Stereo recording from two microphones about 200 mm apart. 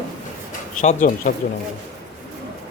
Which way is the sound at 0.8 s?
40° left (ahead or behind).